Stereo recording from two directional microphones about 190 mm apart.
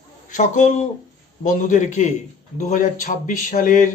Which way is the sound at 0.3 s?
40° left (ahead or behind).